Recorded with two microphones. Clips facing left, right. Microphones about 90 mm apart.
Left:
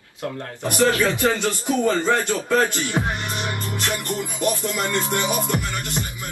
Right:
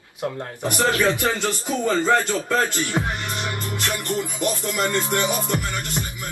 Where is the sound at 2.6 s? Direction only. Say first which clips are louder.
Left 1 dB; 20° left (ahead or behind).